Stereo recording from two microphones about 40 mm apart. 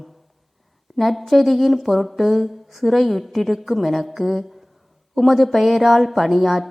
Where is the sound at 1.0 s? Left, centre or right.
Centre.